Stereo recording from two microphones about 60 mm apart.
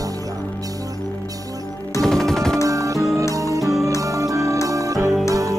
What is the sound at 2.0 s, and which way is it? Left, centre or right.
Music, centre.